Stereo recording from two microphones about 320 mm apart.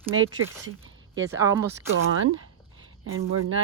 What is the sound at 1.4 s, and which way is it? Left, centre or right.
Speech, centre.